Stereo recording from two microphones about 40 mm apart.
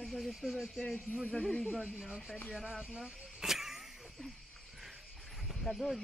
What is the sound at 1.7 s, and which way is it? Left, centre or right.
Speech, centre.